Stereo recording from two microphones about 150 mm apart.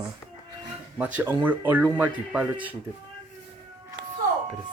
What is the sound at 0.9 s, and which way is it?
Speech, 10° right (ahead or behind).